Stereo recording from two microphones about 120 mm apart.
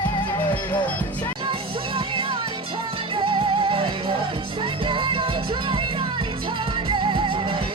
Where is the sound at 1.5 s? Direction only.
45° right (ahead or behind).